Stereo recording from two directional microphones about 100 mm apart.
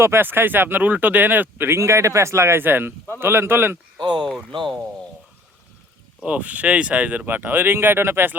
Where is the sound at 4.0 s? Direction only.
45° right (ahead or behind).